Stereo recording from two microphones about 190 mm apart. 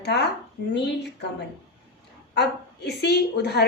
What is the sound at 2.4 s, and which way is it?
A woman's voice, 60° left (ahead or behind).